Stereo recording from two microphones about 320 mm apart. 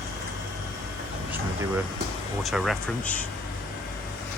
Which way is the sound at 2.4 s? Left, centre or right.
Centre.